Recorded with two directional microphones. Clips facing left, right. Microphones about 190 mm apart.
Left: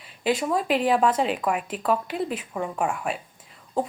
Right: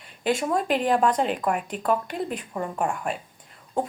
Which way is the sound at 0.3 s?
Centre (ahead or behind).